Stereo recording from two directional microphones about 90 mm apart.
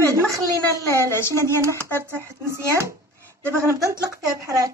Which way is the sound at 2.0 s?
25° right (ahead or behind).